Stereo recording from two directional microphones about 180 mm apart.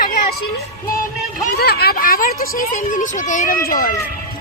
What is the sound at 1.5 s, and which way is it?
Speech, 60° left (ahead or behind).